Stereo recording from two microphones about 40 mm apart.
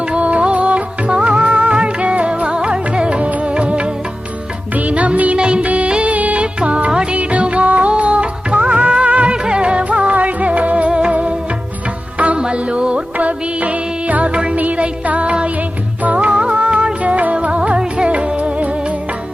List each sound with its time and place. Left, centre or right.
0.0 s music: right
4.7 s music: right
5.4 s music of bollywood: right
6.4 s music: right
6.9 s music of bollywood: right
7.2 s music of bollywood: right
9.3 s music: right
14.5 s music: right
17.6 s music: right